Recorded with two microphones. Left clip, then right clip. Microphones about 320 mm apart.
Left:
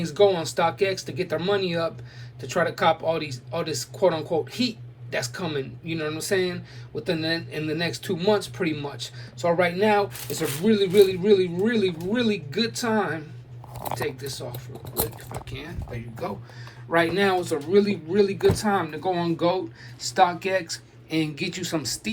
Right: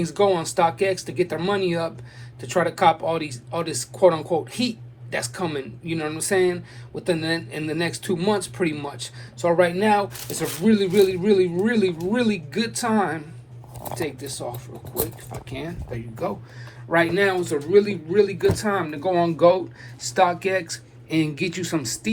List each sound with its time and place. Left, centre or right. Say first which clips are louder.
0.0 s speech: even; centre
15.4 s speech: right 5 dB; centre
15.9 s speech: right 4 dB; centre